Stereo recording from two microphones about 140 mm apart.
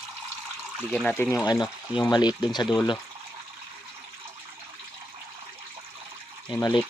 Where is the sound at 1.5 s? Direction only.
30° left (ahead or behind).